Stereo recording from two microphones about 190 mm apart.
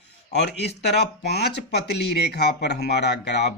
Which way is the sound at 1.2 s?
60° left (ahead or behind).